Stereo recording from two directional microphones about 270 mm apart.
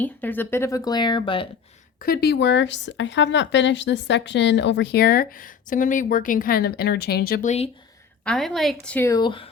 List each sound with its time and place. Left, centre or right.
0.0 s speech: centre
2.0 s speech: left
8.2 s a woman's voice: centre